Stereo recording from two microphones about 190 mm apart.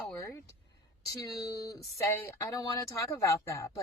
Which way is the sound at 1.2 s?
20° left (ahead or behind).